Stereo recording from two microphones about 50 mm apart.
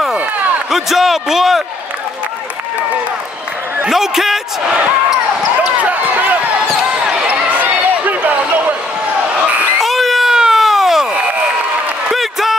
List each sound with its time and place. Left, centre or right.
0.7 s a man's voice: centre
3.9 s a man's voice: centre
4.6 s basketball bounce: centre
5.8 s basketball bounce: right
6.5 s basketball bounce: centre
7.2 s basketball bounce: right
9.8 s crowd: centre
10.3 s baby cry: centre
11.1 s a sound: right
12.1 s a sound: centre